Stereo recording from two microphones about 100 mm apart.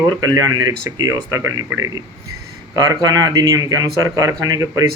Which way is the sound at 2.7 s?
40° right (ahead or behind).